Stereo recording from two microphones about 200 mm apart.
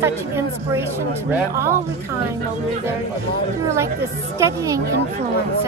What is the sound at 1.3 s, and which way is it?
Speech, 15° right (ahead or behind).